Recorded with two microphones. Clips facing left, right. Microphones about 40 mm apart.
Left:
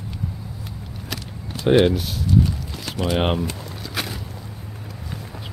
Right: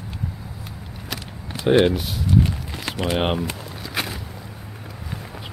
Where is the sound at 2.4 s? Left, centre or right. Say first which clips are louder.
Even; right.